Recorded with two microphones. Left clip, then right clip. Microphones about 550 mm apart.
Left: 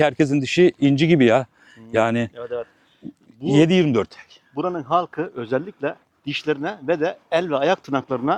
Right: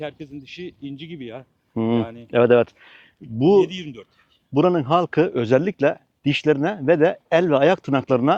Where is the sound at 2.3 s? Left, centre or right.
Right.